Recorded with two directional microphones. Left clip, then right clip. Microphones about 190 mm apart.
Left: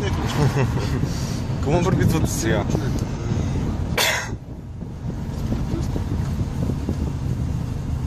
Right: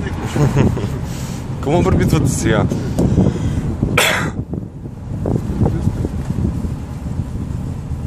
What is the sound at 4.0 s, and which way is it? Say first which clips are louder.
Cough: right 6 dB; 30° right (ahead or behind).